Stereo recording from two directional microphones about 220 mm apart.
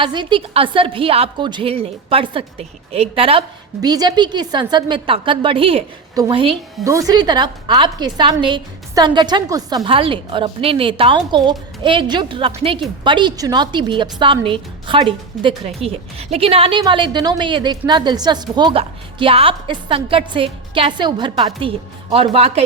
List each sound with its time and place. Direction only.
0.0 s a woman's voice: 20° right (ahead or behind)